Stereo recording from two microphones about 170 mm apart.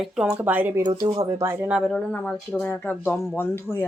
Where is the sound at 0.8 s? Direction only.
20° right (ahead or behind).